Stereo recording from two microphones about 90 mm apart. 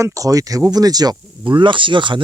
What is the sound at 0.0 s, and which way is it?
Speech, 40° right (ahead or behind).